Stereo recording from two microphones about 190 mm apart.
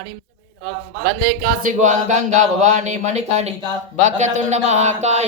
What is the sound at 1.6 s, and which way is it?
Speech, 40° right (ahead or behind).